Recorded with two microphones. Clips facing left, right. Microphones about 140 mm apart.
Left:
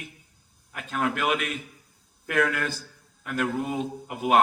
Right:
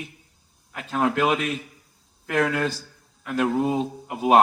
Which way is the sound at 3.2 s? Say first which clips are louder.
Right 5 dB; 20° right (ahead or behind).